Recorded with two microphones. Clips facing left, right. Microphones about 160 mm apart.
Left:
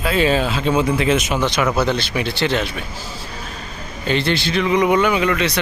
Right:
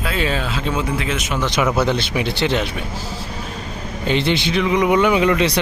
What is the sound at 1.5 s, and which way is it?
Speech, 15° right (ahead or behind).